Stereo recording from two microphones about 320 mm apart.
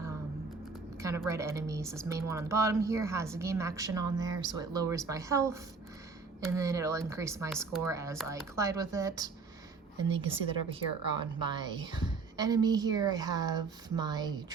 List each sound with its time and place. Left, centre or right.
0.9 s speech: centre